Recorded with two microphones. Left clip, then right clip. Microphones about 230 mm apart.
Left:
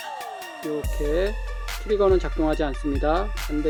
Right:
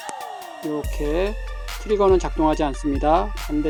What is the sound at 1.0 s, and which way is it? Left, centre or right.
Speech, right.